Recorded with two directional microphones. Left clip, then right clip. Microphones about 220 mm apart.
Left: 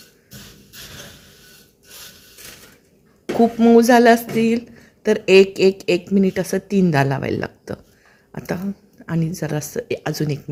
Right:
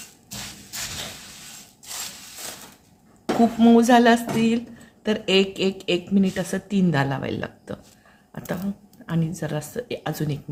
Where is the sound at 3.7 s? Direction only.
20° left (ahead or behind).